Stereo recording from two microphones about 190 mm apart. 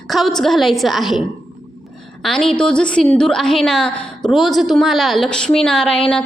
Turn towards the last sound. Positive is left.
turn(degrees=5)  # may be behind; listen again after turning